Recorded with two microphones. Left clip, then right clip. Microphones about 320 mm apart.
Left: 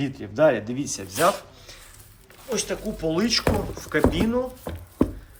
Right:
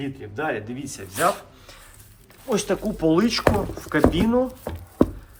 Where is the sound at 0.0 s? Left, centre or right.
Centre.